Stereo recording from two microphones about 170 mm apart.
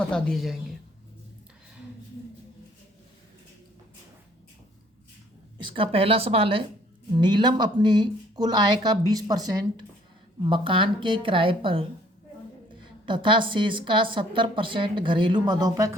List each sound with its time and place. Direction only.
0.0 s a woman's voice: 5° left (ahead or behind)
5.5 s a woman's voice: 30° right (ahead or behind)
13.1 s a woman's voice: 30° right (ahead or behind)